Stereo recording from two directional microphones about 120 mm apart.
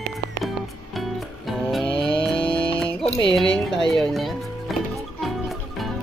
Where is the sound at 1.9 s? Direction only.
45° left (ahead or behind).